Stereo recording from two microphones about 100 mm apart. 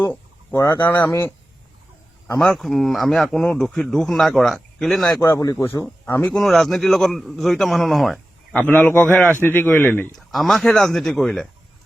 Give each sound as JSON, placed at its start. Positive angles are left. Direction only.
{"t": 0.5, "sound": "speech", "side_deg": 30}
{"t": 2.4, "sound": "speech", "side_deg": 5}
{"t": 5.1, "sound": "speech", "side_deg": 35}
{"t": 6.3, "sound": "speech", "side_deg": 0}
{"t": 8.5, "sound": "a man's voice", "side_deg": 15}
{"t": 10.2, "sound": "speech", "side_deg": 0}